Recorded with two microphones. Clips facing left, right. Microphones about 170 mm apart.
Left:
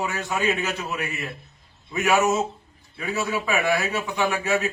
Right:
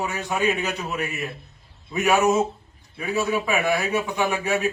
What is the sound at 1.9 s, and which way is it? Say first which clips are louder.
A man's voice: right 2 dB; 15° right (ahead or behind).